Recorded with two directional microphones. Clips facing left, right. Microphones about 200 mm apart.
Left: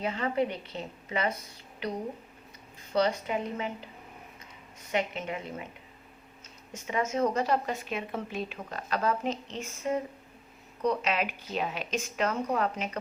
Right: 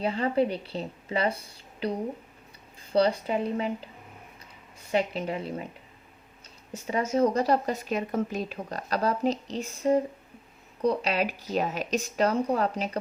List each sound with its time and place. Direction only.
0.0 s speech: 30° right (ahead or behind)
4.9 s speech: 35° right (ahead or behind)
6.8 s speech: 35° right (ahead or behind)